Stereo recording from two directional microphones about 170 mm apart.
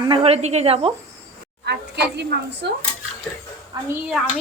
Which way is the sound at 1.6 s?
75° right (ahead or behind).